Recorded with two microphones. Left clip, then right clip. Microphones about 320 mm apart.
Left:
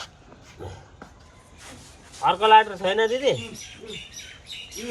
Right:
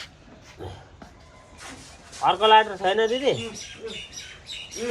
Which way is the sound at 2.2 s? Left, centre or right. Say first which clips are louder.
Even; centre.